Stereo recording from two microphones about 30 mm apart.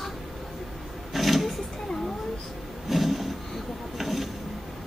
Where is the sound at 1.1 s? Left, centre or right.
Centre.